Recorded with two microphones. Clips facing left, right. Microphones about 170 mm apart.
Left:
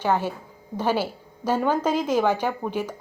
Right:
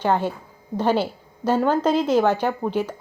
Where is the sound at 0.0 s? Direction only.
10° left (ahead or behind).